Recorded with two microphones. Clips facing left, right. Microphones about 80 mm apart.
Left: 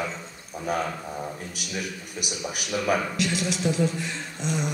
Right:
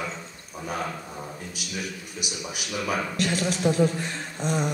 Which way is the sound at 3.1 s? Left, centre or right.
Right.